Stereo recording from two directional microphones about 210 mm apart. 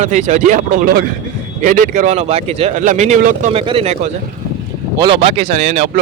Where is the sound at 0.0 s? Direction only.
35° right (ahead or behind).